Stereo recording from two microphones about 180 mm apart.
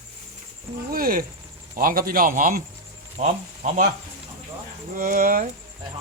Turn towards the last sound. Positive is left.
turn(degrees=-50)  # may be behind; listen again after turning